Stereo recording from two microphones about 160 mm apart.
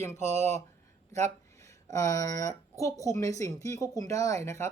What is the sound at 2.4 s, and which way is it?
Speech, 20° left (ahead or behind).